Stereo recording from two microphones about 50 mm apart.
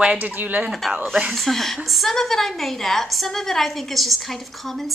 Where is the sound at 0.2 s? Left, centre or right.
Right.